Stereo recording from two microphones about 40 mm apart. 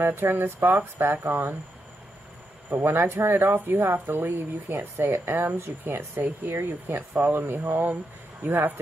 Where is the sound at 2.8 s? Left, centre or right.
Right.